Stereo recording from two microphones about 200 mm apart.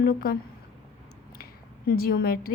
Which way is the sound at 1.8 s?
50° left (ahead or behind).